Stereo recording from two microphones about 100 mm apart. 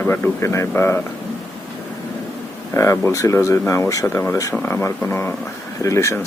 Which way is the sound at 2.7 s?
30° left (ahead or behind).